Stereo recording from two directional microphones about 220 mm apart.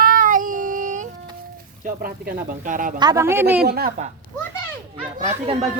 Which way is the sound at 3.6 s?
45° right (ahead or behind).